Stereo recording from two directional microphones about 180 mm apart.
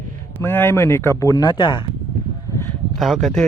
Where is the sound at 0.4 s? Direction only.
10° left (ahead or behind).